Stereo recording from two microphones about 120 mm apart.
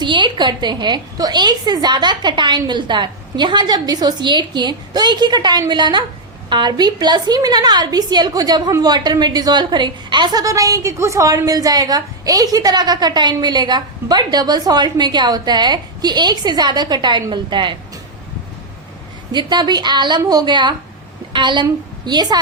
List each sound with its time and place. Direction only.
0.0 s a woman's voice: 40° right (ahead or behind)
19.3 s a woman's voice: 40° right (ahead or behind)